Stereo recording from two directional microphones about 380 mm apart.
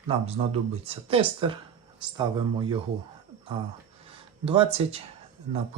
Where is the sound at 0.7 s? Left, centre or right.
Centre.